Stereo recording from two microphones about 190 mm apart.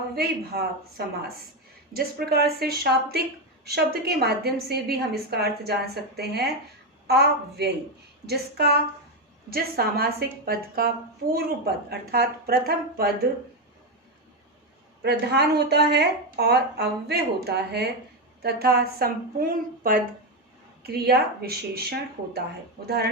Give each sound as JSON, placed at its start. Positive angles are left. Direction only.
{"t": 0.2, "sound": "a woman's voice", "side_deg": -55}
{"t": 15.0, "sound": "a woman's voice", "side_deg": -60}